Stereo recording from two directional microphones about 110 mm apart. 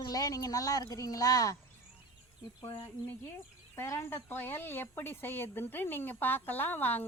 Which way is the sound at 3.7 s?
25° left (ahead or behind).